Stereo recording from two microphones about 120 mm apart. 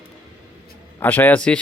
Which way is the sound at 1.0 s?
15° left (ahead or behind).